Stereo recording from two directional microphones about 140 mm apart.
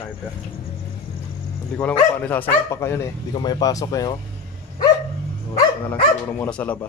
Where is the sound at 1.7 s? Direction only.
10° left (ahead or behind).